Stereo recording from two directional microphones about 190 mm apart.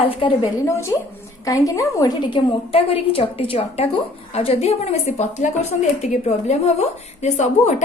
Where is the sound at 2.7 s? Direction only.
30° left (ahead or behind).